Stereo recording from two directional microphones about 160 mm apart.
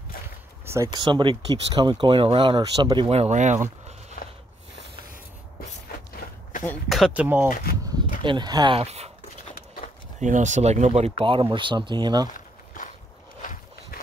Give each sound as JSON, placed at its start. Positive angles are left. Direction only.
{"t": 0.9, "sound": "speech", "side_deg": -30}
{"t": 4.2, "sound": "a sound", "side_deg": 55}
{"t": 6.9, "sound": "speech", "side_deg": 0}
{"t": 7.5, "sound": "a sound", "side_deg": 55}
{"t": 8.2, "sound": "speech", "side_deg": -30}
{"t": 8.7, "sound": "speech", "side_deg": -40}
{"t": 10.2, "sound": "speech", "side_deg": -50}
{"t": 12.4, "sound": "walk", "side_deg": 55}
{"t": 13.9, "sound": "a sound", "side_deg": 65}